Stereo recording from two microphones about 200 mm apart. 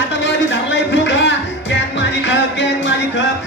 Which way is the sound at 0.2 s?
60° left (ahead or behind).